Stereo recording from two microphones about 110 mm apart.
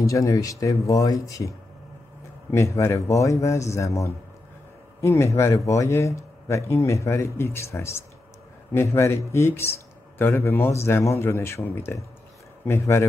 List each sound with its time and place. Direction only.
0.0 s speech: 30° left (ahead or behind)
2.5 s speech: 25° left (ahead or behind)